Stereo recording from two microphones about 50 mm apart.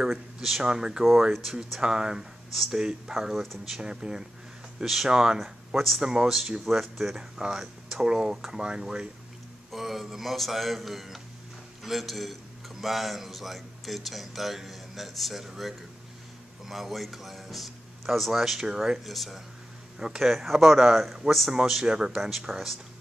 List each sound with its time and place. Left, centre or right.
0.0 s speech: centre
1.3 s speech: centre
1.8 s speech: centre
3.8 s speech: centre
5.8 s speech: centre
6.0 s speech: centre
6.6 s speech: centre
7.2 s speech: centre
9.7 s a man's voice: centre